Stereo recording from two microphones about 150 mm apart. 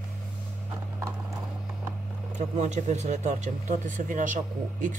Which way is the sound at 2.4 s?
50° right (ahead or behind).